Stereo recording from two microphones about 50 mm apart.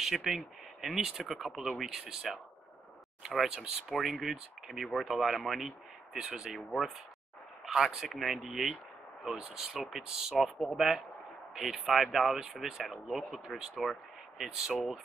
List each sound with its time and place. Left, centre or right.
0.0 s speech: centre
1.0 s speech: centre
1.3 s speech: centre
7.6 s speech: centre